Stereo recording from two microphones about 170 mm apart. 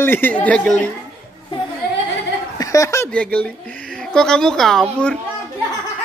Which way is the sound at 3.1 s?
10° left (ahead or behind).